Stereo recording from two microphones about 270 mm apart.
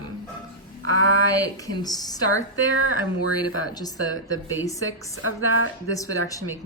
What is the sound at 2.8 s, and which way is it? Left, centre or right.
Speech, left.